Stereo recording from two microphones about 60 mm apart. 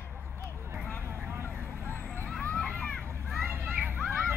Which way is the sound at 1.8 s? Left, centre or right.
Left.